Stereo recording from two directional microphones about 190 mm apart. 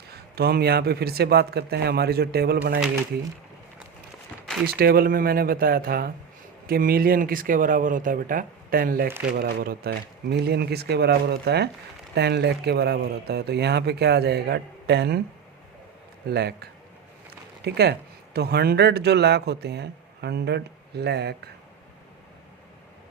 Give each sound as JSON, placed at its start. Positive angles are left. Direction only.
{"t": 0.1, "sound": "a man's voice", "side_deg": -55}
{"t": 4.6, "sound": "a man's voice", "side_deg": -55}
{"t": 16.3, "sound": "a man's voice", "side_deg": -60}